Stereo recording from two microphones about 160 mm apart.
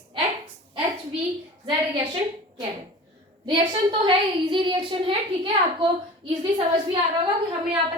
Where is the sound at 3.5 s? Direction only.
30° right (ahead or behind).